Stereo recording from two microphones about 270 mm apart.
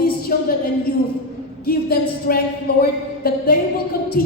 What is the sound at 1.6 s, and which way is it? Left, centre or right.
A woman's voice, left.